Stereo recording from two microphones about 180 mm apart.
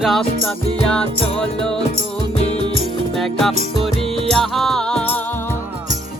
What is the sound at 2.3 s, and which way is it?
Music, 35° left (ahead or behind).